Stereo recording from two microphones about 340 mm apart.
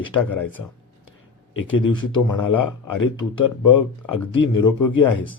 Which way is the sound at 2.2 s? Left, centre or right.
Left.